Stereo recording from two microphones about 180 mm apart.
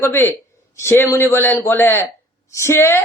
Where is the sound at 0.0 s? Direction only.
10° left (ahead or behind).